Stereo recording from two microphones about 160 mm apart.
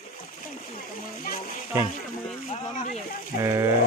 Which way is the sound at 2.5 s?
45° left (ahead or behind).